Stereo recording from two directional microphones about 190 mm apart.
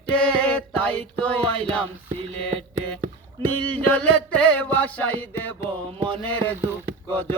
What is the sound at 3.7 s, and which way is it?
Music, 10° left (ahead or behind).